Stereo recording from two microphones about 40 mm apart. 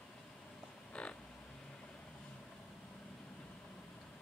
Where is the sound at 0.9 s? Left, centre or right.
Left.